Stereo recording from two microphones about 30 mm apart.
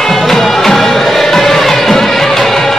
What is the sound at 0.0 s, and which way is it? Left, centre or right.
Music, centre.